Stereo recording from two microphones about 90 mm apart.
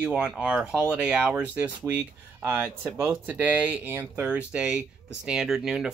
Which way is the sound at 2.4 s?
20° right (ahead or behind).